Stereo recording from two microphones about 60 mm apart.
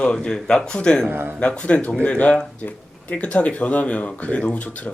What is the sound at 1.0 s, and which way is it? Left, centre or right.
Speech, right.